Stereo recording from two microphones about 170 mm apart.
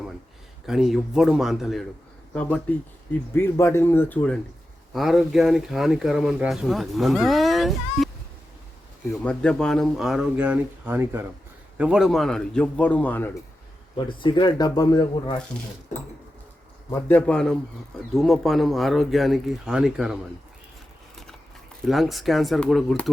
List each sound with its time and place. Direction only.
0.7 s speech: centre (ahead or behind)
4.9 s speech: centre (ahead or behind)
9.2 s speech: 5° left (ahead or behind)
14.2 s speech: 25° left (ahead or behind)
16.9 s speech: 10° left (ahead or behind)
21.8 s speech: centre (ahead or behind)